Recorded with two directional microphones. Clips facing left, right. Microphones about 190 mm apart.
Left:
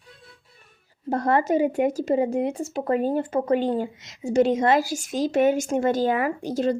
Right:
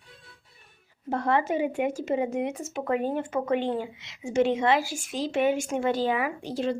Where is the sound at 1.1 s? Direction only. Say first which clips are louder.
Left 4 dB; 40° left (ahead or behind).